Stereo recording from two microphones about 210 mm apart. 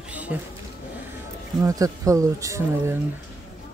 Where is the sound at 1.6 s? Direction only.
15° right (ahead or behind).